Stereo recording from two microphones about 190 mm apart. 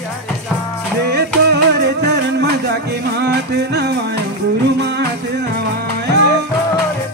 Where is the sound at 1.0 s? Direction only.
60° right (ahead or behind).